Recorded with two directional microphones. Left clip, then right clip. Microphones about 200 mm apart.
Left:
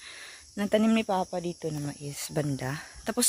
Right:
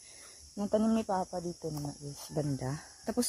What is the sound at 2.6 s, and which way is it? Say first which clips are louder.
Speech: left 5 dB; 5° left (ahead or behind).